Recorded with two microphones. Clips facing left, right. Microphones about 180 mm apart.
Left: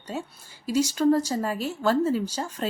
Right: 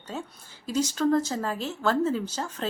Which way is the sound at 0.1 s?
10° left (ahead or behind).